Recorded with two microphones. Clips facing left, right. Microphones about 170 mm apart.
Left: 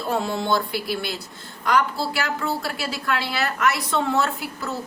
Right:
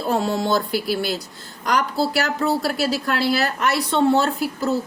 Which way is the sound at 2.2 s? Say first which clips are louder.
Right 5 dB; 40° right (ahead or behind).